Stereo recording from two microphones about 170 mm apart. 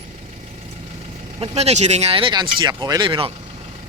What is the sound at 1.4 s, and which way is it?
Speech, 40° right (ahead or behind).